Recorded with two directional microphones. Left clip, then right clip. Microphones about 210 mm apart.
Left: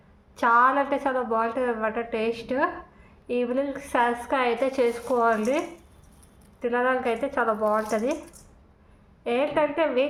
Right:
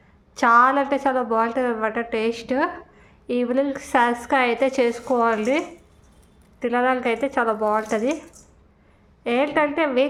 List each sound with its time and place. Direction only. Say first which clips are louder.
0.3 s a woman's voice: right 4 dB; 30° right (ahead or behind)
9.2 s a woman's voice: right 3 dB; 25° right (ahead or behind)